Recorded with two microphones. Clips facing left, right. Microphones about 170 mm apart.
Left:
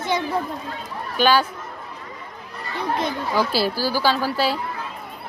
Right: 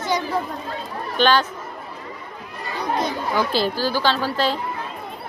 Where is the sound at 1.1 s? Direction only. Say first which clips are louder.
Even; 10° left (ahead or behind).